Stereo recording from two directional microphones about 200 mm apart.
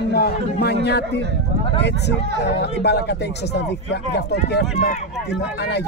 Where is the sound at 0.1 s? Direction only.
55° left (ahead or behind).